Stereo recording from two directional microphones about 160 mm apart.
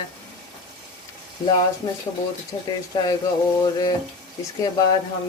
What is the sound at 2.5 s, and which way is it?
Speech, 25° left (ahead or behind).